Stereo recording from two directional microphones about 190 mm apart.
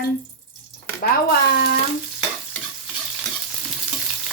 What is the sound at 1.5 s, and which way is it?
Stir, 55° left (ahead or behind).